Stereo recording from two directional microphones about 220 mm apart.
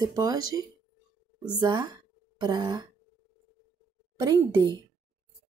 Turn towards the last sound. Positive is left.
turn(degrees=-15)  # may be behind; listen again after turning